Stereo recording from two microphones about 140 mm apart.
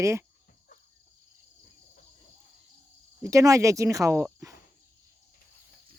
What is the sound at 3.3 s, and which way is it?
Speech, 25° right (ahead or behind).